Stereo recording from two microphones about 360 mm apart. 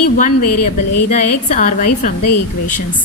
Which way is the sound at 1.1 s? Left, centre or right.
Left.